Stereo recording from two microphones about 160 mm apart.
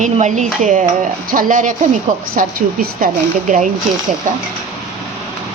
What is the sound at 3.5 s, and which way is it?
Speech, 55° right (ahead or behind).